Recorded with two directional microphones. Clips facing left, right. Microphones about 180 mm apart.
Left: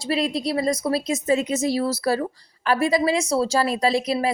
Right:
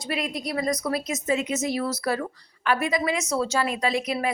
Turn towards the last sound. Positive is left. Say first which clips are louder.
# left 4 dB
turn(degrees=35)  # may be behind; listen again after turning